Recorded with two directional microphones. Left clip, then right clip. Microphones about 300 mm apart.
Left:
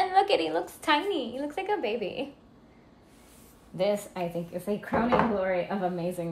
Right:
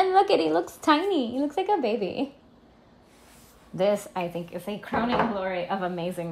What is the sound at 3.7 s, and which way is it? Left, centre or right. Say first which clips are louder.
Speech: right 3 dB; right.